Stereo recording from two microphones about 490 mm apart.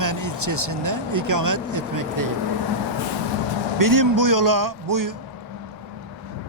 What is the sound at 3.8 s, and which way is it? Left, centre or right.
Speech, right.